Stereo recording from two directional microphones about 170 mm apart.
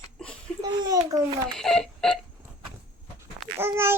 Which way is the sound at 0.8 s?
20° right (ahead or behind).